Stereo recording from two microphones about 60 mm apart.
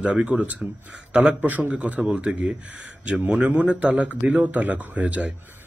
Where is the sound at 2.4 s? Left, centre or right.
Centre.